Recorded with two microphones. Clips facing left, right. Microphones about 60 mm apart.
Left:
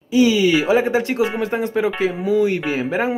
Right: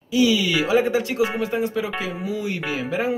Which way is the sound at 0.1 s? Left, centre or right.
Left.